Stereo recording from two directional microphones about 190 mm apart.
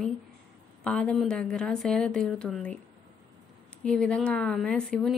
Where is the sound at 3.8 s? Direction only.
5° left (ahead or behind).